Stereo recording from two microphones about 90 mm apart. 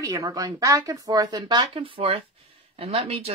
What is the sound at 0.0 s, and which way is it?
Speech, 40° right (ahead or behind).